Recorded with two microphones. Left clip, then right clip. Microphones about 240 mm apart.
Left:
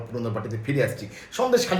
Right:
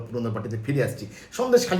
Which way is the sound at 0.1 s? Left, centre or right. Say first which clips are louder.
Even; centre.